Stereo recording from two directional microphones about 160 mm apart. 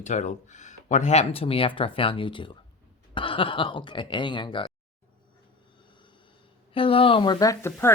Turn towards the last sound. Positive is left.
turn(degrees=20)  # may be behind; listen again after turning